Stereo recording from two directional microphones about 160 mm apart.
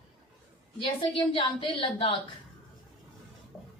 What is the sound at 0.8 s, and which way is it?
A woman's voice, 35° left (ahead or behind).